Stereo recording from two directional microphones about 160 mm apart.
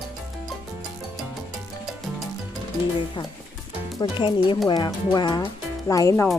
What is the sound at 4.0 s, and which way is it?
Speech, 30° left (ahead or behind).